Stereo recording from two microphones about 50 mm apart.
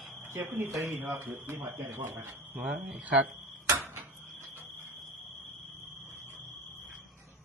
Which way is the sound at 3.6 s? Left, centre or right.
Right.